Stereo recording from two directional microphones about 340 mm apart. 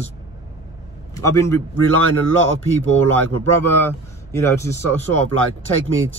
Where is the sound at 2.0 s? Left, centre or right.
Right.